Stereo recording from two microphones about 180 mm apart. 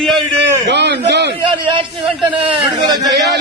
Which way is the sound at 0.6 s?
70° right (ahead or behind).